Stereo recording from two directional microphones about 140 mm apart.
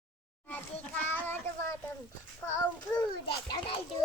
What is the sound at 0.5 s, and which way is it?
A child's voice, 15° left (ahead or behind).